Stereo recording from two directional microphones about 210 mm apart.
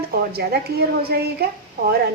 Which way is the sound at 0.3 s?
50° right (ahead or behind).